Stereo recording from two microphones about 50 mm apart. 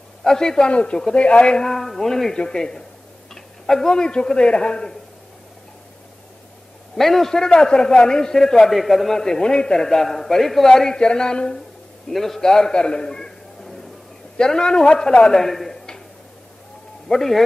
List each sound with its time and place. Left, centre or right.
0.2 s a man's voice: centre
1.7 s a man's voice: centre
7.0 s a man's voice: centre
12.1 s a man's voice: centre
17.1 s a man's voice: centre